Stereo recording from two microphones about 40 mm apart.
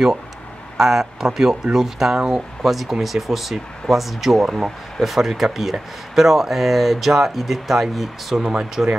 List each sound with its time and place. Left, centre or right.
0.7 s speech: centre
8.4 s speech: centre